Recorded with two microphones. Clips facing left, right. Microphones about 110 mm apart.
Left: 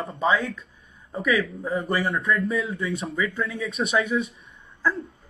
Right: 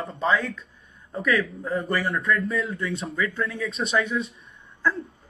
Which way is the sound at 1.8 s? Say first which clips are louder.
Left 2 dB; 25° left (ahead or behind).